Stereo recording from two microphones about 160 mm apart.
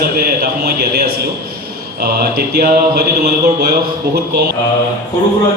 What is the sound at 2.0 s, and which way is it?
Speech, 75° right (ahead or behind).